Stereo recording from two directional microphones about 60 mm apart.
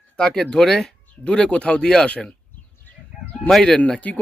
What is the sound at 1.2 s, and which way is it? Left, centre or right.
Speech, centre.